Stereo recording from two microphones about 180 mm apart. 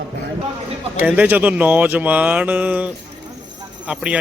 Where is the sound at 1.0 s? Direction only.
10° right (ahead or behind).